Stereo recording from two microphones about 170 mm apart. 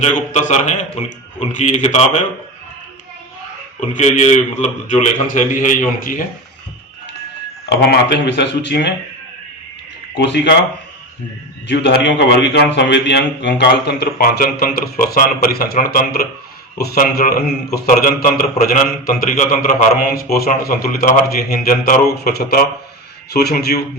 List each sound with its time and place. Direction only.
0.3 s a man's voice: 45° left (ahead or behind)
3.8 s a man's voice: 40° left (ahead or behind)
7.7 s speech: 85° left
10.2 s speech: 85° left
11.7 s a man's voice: 80° left